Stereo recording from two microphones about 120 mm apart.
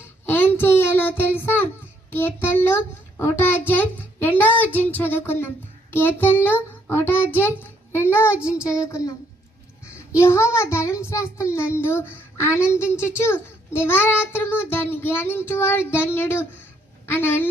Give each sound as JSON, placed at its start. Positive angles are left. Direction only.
{"t": 0.3, "sound": "a sound", "side_deg": 15}
{"t": 2.0, "sound": "a child's voice", "side_deg": 20}
{"t": 8.4, "sound": "child singing", "side_deg": -10}
{"t": 8.8, "sound": "a child's voice", "side_deg": 25}
{"t": 10.2, "sound": "a child's voice", "side_deg": 25}